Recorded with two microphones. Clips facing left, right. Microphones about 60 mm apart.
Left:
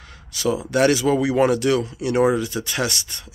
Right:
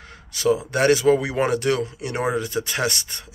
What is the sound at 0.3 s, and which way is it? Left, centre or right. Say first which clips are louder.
Speech: right 1 dB; right.